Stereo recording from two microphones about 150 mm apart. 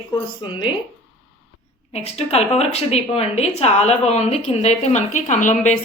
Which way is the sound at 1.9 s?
45° left (ahead or behind).